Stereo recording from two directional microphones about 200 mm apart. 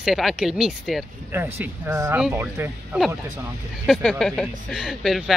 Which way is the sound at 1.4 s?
15° right (ahead or behind).